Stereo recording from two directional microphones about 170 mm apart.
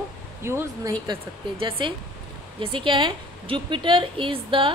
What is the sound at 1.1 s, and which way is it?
A woman's voice, 30° right (ahead or behind).